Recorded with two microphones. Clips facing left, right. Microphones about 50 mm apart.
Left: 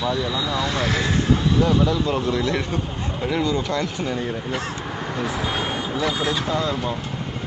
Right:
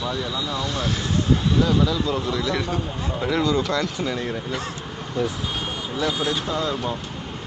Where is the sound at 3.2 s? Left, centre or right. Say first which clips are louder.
Right 1 dB; centre.